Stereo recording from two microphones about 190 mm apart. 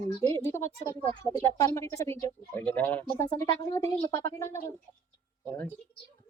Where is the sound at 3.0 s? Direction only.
20° left (ahead or behind).